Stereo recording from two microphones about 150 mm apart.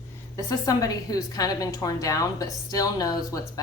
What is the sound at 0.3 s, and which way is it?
A woman's voice, 20° left (ahead or behind).